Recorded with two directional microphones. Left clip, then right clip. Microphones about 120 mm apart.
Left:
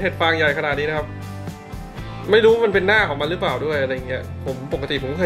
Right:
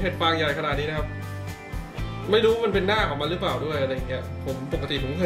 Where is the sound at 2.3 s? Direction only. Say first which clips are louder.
Left 6 dB; 20° left (ahead or behind).